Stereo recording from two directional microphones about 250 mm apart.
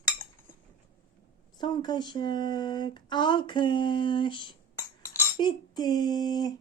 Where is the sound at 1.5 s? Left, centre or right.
Centre.